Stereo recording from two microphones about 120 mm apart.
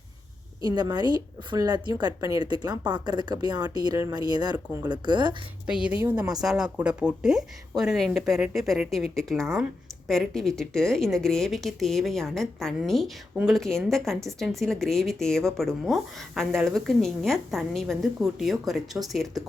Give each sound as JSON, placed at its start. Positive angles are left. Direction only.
{"t": 0.6, "sound": "a woman's voice", "side_deg": -35}
{"t": 5.6, "sound": "a woman's voice", "side_deg": -5}